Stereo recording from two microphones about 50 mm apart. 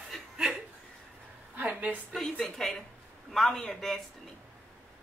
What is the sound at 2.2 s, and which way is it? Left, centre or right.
A man's voice, centre.